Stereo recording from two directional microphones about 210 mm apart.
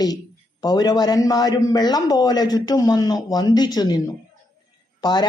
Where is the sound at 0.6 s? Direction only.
20° left (ahead or behind).